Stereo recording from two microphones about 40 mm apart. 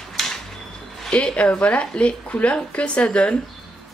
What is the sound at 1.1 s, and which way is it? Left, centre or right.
Speech, left.